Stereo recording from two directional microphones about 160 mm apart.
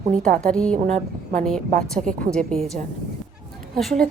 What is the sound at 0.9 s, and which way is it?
Speech, 45° right (ahead or behind).